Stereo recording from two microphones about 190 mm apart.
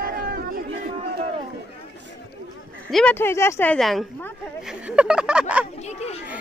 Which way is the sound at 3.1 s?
15° left (ahead or behind).